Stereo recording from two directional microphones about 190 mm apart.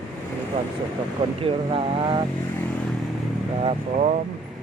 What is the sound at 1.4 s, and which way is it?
Speech, 30° right (ahead or behind).